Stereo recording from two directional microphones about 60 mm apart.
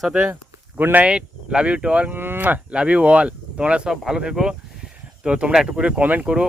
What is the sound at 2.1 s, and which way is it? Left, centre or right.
Speech, right.